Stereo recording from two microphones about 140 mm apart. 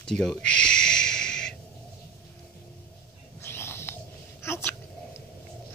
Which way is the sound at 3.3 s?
15° left (ahead or behind).